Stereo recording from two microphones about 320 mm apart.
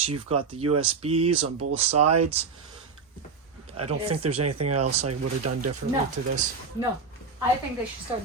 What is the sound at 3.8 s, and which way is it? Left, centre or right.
Speech, centre.